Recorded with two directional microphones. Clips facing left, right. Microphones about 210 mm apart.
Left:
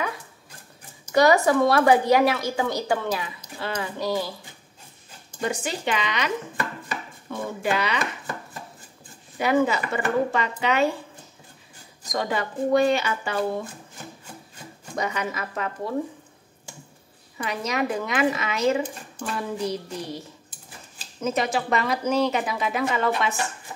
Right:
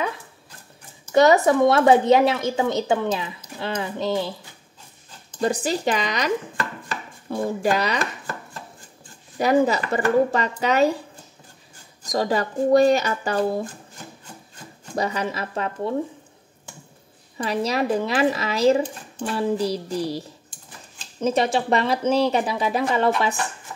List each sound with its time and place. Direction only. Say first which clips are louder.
1.1 s speech: right 2 dB; 20° right (ahead or behind)
5.4 s speech: right 5 dB; 35° right (ahead or behind)
9.4 s speech: right 3 dB; 35° right (ahead or behind)
12.1 s speech: right 4 dB; 35° right (ahead or behind)
15.0 s speech: right 3 dB; 30° right (ahead or behind)
17.4 s speech: right 4 dB; 35° right (ahead or behind)